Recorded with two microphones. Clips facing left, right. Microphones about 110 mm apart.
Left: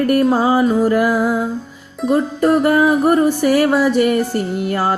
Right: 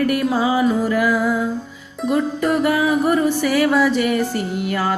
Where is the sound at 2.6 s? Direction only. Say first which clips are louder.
Left 4 dB; 40° left (ahead or behind).